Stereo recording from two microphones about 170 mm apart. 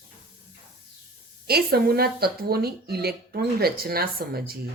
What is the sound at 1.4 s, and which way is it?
A woman's voice, 65° right (ahead or behind).